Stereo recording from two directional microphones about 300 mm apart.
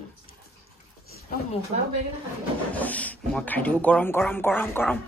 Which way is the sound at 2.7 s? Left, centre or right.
Centre.